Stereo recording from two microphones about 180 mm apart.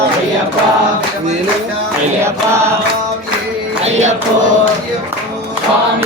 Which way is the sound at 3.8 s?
40° right (ahead or behind).